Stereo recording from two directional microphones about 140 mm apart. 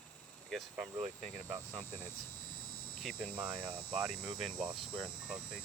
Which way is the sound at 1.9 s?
15° left (ahead or behind).